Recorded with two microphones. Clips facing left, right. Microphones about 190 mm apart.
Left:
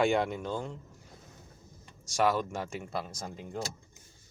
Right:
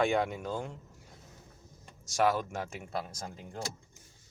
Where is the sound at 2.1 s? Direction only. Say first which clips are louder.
Left 1 dB; centre (ahead or behind).